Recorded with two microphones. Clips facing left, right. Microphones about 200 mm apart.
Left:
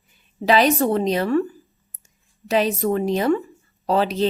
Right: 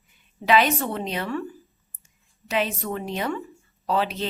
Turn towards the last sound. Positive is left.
turn(degrees=35)  # may be behind; listen again after turning